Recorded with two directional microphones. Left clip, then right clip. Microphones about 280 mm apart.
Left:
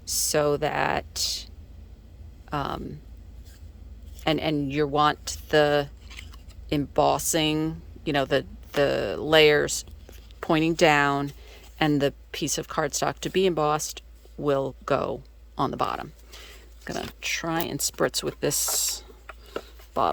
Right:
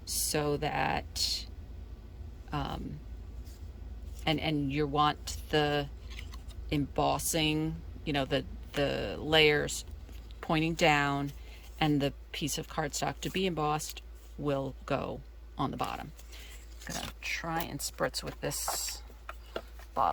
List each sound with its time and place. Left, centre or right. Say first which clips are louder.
0.0 s speech: left 9 dB; centre
2.5 s speech: left 8 dB; centre
4.2 s a woman's voice: left 6 dB; centre